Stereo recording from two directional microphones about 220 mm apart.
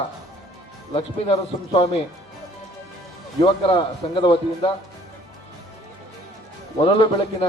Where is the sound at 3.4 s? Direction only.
25° left (ahead or behind).